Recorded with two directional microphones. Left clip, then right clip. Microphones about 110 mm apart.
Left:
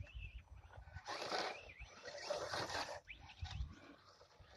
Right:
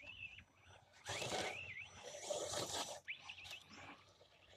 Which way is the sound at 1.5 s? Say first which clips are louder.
Right 3 dB; 35° right (ahead or behind).